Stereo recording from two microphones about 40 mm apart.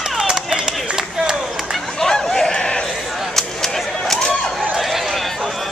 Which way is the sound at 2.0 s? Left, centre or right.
Centre.